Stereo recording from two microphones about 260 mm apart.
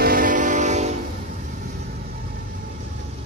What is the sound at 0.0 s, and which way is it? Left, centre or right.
Train, right.